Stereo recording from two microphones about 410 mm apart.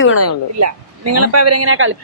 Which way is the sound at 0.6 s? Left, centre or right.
Right.